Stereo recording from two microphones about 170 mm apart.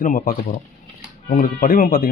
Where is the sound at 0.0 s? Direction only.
55° left (ahead or behind).